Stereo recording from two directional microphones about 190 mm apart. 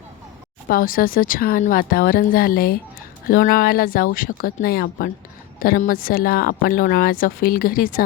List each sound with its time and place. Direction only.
0.7 s speech: 50° left (ahead or behind)